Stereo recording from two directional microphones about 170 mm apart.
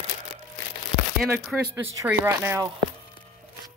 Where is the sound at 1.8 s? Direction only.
10° right (ahead or behind).